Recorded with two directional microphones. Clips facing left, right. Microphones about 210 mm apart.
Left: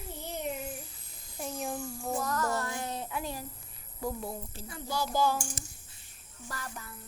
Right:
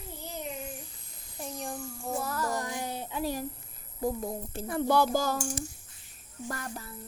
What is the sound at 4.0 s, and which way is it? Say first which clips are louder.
Speech: right 4 dB; 50° right (ahead or behind).